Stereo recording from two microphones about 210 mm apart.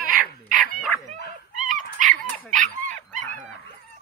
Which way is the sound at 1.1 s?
40° right (ahead or behind).